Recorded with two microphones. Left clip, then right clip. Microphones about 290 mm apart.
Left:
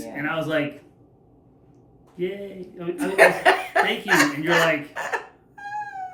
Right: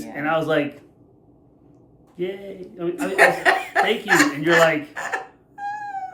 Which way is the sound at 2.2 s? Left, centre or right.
Centre.